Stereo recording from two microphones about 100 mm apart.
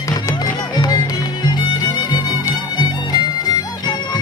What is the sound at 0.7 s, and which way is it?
Music, 45° left (ahead or behind).